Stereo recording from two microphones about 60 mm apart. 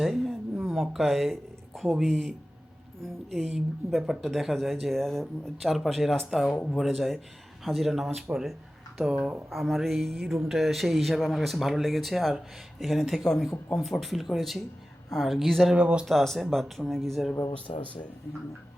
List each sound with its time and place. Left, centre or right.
0.0 s a woman's voice: centre
3.9 s speech: centre
9.5 s speech: centre
15.7 s speech: centre
16.0 s speech: centre
17.5 s speech: left